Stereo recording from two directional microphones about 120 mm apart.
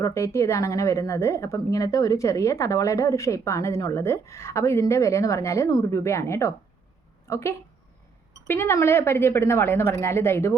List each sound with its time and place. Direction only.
0.0 s speech: 25° left (ahead or behind)